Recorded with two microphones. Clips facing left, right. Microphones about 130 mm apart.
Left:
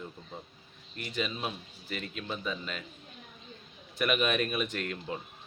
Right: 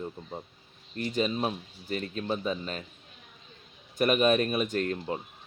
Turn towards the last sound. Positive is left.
turn(degrees=-35)  # may be behind; listen again after turning